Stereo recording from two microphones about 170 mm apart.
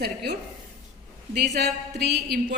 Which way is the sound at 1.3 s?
70° right (ahead or behind).